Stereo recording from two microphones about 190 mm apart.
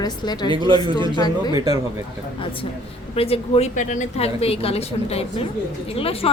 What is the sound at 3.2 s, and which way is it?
A woman's voice, 30° left (ahead or behind).